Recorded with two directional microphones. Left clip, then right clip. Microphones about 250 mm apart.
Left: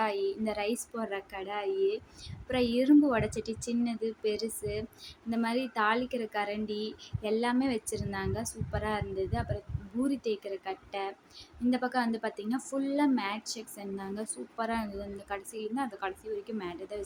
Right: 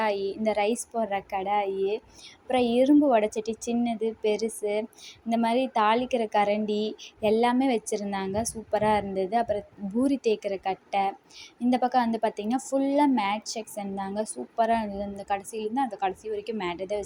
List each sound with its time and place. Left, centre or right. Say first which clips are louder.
0.0 s a woman's voice: right 4 dB; centre